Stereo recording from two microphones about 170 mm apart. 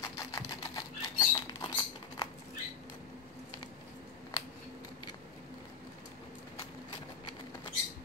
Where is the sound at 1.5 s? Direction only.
25° left (ahead or behind).